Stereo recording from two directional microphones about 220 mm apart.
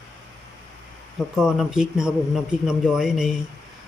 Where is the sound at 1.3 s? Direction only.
Centre (ahead or behind).